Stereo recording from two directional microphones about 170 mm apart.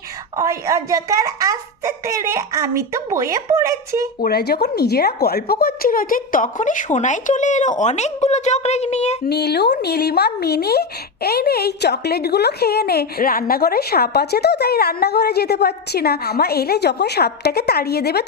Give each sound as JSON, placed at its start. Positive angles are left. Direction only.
{"t": 0.3, "sound": "a child's voice", "side_deg": -20}
{"t": 4.2, "sound": "a woman's voice", "side_deg": 70}
{"t": 9.2, "sound": "speech", "side_deg": 70}